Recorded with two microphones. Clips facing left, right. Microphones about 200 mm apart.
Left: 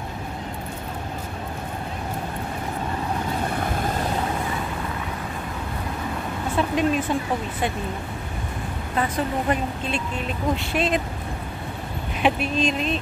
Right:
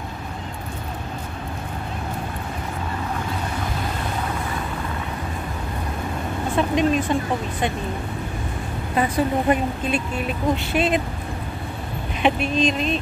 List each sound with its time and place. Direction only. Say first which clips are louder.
6.5 s speech: right 2 dB; 5° left (ahead or behind)
8.9 s speech: right 4 dB; 10° right (ahead or behind)
12.2 s speech: right 2 dB; 5° left (ahead or behind)